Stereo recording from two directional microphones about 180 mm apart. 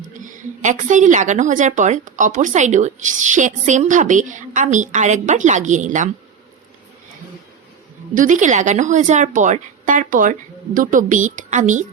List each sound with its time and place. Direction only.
0.2 s a woman's voice: 45° right (ahead or behind)
8.1 s a woman's voice: 45° right (ahead or behind)